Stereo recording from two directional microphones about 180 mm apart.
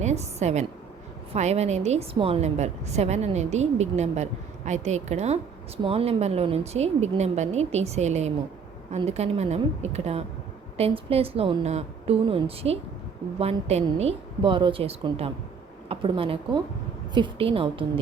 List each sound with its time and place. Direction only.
0.0 s a woman's voice: 35° right (ahead or behind)